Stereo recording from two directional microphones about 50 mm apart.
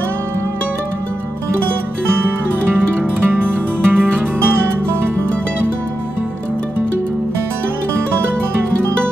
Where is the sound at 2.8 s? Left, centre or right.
Right.